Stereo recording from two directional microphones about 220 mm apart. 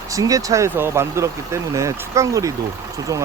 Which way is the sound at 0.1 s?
15° right (ahead or behind).